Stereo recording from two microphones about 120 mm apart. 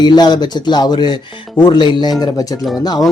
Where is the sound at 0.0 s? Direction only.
35° left (ahead or behind).